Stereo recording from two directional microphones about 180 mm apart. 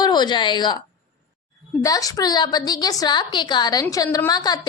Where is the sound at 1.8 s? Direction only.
20° left (ahead or behind).